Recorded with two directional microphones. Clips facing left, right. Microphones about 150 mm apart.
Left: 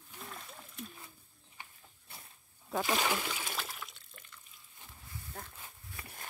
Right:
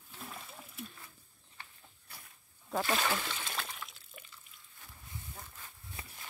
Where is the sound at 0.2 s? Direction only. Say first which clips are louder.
Right 1 dB; centre (ahead or behind).